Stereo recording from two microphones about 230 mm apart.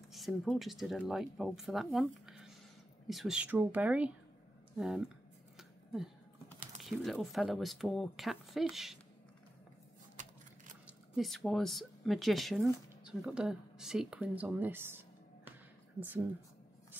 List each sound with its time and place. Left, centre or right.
0.1 s speech: centre
6.8 s speech: centre
10.9 s a woman's voice: centre